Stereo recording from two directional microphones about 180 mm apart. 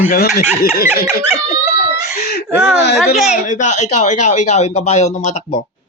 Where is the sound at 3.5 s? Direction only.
40° left (ahead or behind).